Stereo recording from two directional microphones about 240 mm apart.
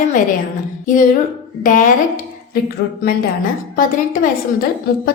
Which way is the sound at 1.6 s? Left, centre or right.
Left.